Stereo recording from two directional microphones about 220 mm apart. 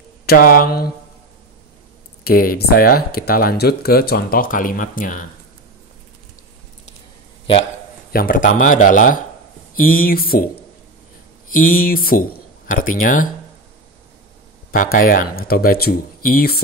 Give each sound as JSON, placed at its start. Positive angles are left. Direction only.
{"t": 0.3, "sound": "speech", "side_deg": 40}
{"t": 2.2, "sound": "speech", "side_deg": 40}
{"t": 7.5, "sound": "a sound", "side_deg": 25}
{"t": 8.1, "sound": "speech", "side_deg": 40}
{"t": 11.8, "sound": "speech", "side_deg": 40}
{"t": 14.7, "sound": "speech", "side_deg": 40}